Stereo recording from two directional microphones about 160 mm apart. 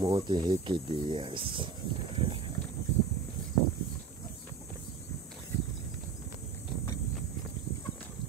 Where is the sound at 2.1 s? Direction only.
35° right (ahead or behind).